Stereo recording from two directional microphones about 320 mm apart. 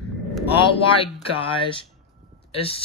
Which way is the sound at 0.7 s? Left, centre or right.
Centre.